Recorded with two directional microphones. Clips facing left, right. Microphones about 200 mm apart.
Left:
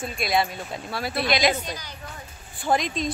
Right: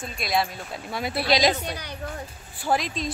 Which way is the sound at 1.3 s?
35° right (ahead or behind).